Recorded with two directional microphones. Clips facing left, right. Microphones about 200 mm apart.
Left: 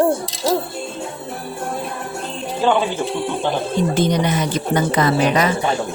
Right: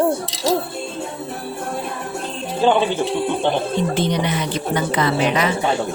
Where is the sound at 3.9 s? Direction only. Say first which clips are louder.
Left 2 dB; 45° left (ahead or behind).